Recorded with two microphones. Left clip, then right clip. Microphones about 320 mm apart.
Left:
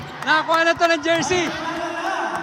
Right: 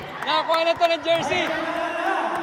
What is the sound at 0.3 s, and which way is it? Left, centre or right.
Speech, left.